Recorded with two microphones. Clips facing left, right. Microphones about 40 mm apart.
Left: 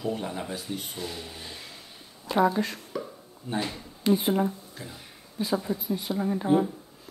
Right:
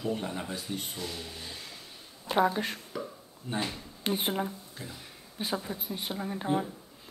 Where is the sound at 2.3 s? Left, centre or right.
Right.